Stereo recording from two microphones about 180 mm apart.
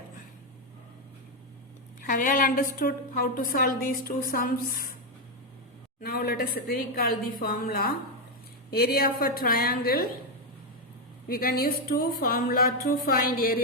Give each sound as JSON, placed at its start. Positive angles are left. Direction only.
{"t": 2.0, "sound": "a woman's voice", "side_deg": 50}
{"t": 6.0, "sound": "a woman's voice", "side_deg": 55}
{"t": 11.3, "sound": "a woman's voice", "side_deg": 55}